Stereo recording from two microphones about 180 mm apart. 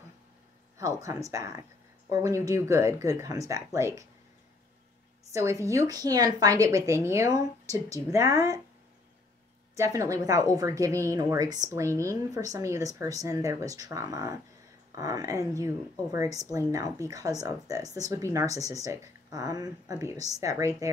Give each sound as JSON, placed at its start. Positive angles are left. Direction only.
{"t": 0.7, "sound": "a woman's voice", "side_deg": -20}
{"t": 5.3, "sound": "a woman's voice", "side_deg": -15}
{"t": 9.8, "sound": "a woman's voice", "side_deg": -20}